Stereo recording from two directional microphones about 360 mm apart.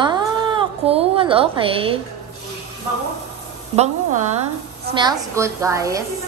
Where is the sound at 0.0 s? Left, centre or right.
Centre.